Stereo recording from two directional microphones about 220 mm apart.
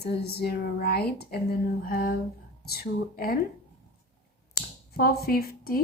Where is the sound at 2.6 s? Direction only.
45° left (ahead or behind).